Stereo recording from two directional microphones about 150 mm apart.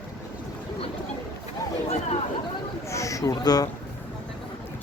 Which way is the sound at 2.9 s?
20° left (ahead or behind).